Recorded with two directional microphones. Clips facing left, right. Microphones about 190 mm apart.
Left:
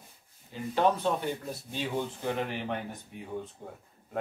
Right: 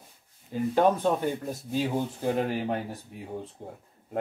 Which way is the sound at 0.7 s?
45° right (ahead or behind).